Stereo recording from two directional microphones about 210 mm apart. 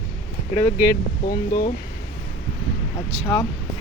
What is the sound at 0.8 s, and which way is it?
Speech, 40° left (ahead or behind).